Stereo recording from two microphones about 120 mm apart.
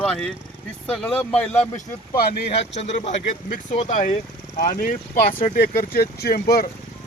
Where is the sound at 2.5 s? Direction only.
65° left (ahead or behind); by 4.1 s 90° left.